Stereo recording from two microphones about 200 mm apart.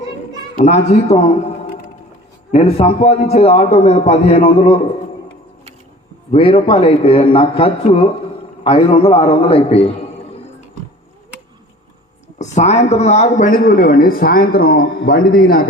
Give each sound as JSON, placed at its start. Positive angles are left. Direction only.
{"t": 0.5, "sound": "a man's voice", "side_deg": 35}
{"t": 6.3, "sound": "a man's voice", "side_deg": 25}
{"t": 12.4, "sound": "speech", "side_deg": 35}